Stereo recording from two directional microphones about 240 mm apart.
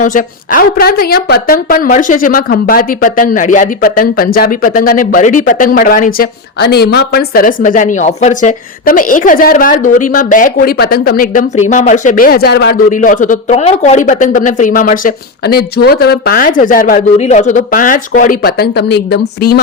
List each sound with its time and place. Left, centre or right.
0.0 s speech: left